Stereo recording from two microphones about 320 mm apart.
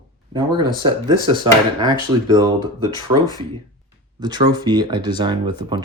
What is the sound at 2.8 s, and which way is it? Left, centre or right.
Speech, centre.